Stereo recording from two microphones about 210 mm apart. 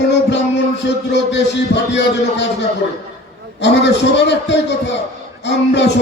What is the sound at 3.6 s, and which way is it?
A man's voice, 55° left (ahead or behind).